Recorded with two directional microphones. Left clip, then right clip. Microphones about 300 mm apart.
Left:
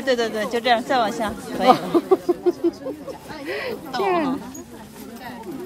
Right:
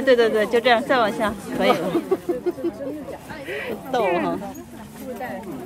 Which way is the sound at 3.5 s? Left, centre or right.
Left.